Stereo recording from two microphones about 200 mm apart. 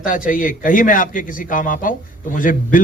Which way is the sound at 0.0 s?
45° left (ahead or behind).